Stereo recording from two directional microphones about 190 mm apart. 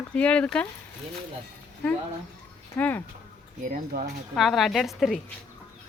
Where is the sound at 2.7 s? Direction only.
10° left (ahead or behind).